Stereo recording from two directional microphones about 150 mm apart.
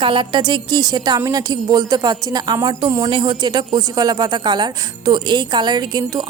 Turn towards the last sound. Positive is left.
turn(degrees=-25)  # may be behind; listen again after turning